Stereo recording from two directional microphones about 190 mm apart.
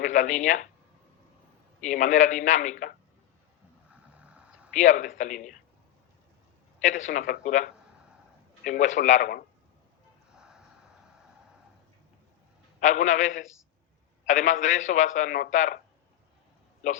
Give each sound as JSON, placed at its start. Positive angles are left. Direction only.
{"t": 0.0, "sound": "speech", "side_deg": 40}
{"t": 1.8, "sound": "a man's voice", "side_deg": 40}
{"t": 4.7, "sound": "a man's voice", "side_deg": 40}
{"t": 6.8, "sound": "a man's voice", "side_deg": 40}
{"t": 10.3, "sound": "a sound", "side_deg": -5}
{"t": 12.8, "sound": "a man's voice", "side_deg": 40}